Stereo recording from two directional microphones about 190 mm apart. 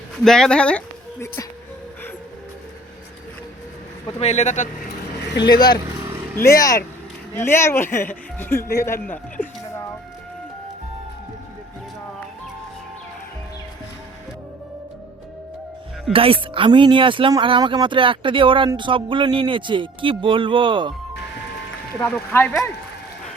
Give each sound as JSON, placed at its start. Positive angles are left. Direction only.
{"t": 0.3, "sound": "speech", "side_deg": 5}
{"t": 4.2, "sound": "speech", "side_deg": 35}
{"t": 5.5, "sound": "speech", "side_deg": 20}
{"t": 16.1, "sound": "speech", "side_deg": -30}
{"t": 21.9, "sound": "speech", "side_deg": 10}